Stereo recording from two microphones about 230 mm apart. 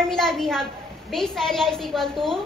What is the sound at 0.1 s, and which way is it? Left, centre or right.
A child's voice, centre.